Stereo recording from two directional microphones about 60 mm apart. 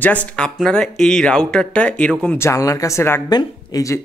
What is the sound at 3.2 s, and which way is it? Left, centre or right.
Speech, left.